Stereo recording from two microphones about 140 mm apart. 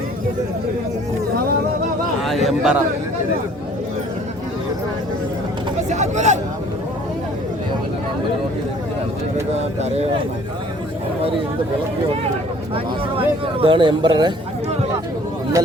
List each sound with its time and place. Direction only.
2.2 s a sound: centre (ahead or behind)
5.9 s hubbub: 55° right (ahead or behind)
12.7 s speech: 40° right (ahead or behind)